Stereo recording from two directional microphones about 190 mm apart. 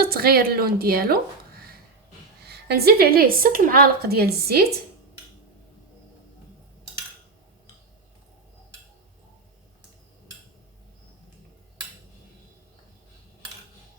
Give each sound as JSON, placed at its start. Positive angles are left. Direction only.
{"t": 0.0, "sound": "a woman's voice", "side_deg": -55}
{"t": 2.4, "sound": "a woman's voice", "side_deg": -55}